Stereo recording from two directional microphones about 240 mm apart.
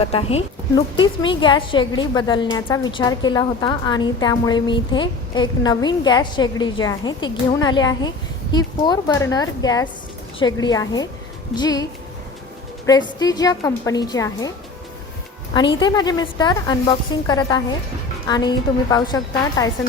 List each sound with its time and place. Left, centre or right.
0.0 s a woman's voice: left
15.5 s a woman's voice: centre